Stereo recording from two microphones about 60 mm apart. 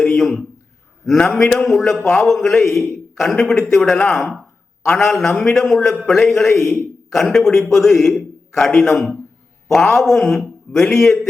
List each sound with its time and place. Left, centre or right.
0.0 s a sound: centre
1.0 s a man's voice: centre
3.8 s a man's voice: centre